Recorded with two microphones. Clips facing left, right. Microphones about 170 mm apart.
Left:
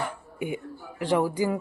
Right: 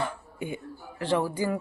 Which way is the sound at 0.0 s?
15° left (ahead or behind).